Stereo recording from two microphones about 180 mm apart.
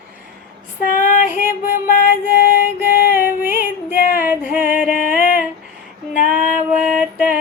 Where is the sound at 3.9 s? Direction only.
55° left (ahead or behind).